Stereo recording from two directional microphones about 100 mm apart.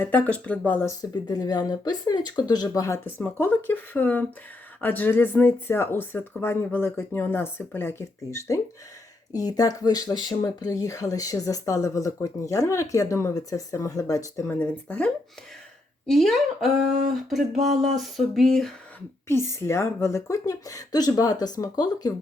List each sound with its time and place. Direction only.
0.0 s speech: 15° left (ahead or behind)
0.9 s speech: 40° left (ahead or behind)
2.8 s speech: 25° left (ahead or behind)
14.6 s speech: 10° left (ahead or behind)
19.3 s speech: 25° left (ahead or behind)